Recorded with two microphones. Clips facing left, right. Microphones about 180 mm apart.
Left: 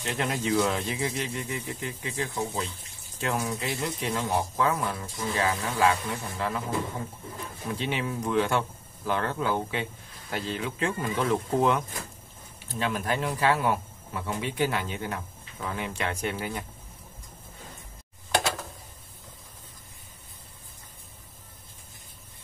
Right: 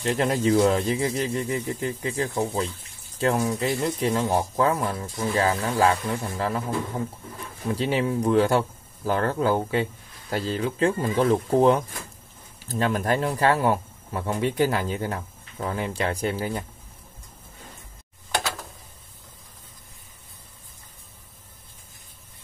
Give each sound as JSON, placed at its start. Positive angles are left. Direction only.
{"t": 0.0, "sound": "speech", "side_deg": -40}
{"t": 7.7, "sound": "speech", "side_deg": -35}
{"t": 12.6, "sound": "speech", "side_deg": -45}